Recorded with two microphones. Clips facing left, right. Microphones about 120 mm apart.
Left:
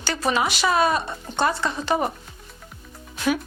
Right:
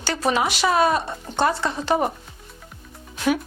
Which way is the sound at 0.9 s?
25° right (ahead or behind).